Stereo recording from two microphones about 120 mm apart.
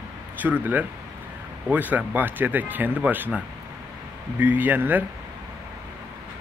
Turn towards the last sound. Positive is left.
turn(degrees=-15)  # may be behind; listen again after turning